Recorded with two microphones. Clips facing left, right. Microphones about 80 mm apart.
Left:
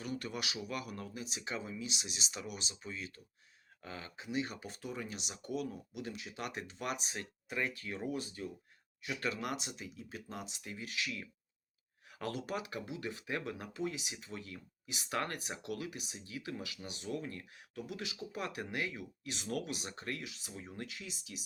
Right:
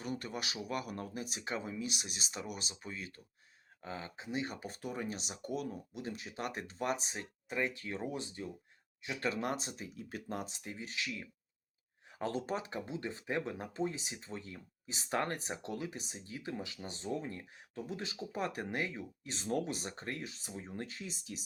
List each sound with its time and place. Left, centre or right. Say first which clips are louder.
0.0 s speech: even; right
3.8 s speech: right 2 dB; right
10.6 s speech: even; right